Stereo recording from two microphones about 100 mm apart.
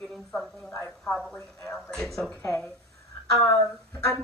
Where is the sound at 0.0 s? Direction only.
5° left (ahead or behind).